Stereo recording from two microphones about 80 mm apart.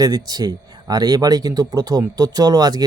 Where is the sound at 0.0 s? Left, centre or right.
Right.